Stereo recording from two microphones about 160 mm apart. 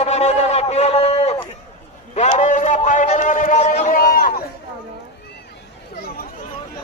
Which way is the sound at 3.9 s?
65° left (ahead or behind).